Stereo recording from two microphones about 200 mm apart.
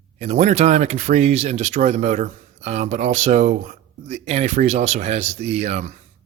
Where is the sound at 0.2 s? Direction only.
35° right (ahead or behind).